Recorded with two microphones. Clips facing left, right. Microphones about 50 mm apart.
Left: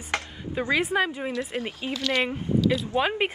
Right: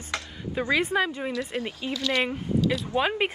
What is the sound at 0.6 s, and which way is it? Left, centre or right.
Speech, centre.